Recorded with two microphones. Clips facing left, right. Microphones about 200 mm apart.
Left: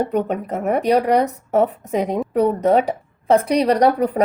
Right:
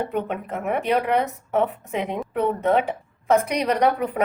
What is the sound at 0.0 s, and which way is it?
Speech, 40° left (ahead or behind).